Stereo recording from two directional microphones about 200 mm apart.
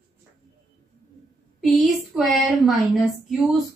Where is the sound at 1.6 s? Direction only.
Centre (ahead or behind).